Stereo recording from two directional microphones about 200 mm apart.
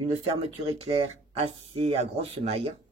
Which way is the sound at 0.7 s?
30° right (ahead or behind).